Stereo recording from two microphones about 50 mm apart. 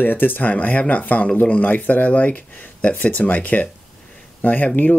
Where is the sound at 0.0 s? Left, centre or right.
Left.